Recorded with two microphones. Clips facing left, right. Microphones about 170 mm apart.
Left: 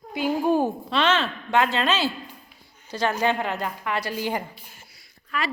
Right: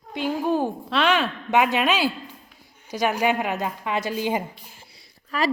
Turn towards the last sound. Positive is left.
turn(degrees=-35)  # may be behind; listen again after turning